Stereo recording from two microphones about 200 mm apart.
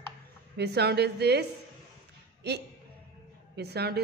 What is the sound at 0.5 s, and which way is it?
Speech, 55° right (ahead or behind).